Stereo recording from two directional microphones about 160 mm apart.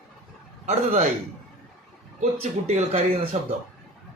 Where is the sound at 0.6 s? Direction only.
45° right (ahead or behind).